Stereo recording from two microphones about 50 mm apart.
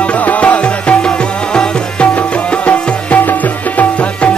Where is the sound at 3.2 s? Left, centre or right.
Left.